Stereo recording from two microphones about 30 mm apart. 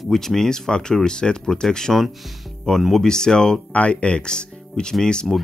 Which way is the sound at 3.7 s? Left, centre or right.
Left.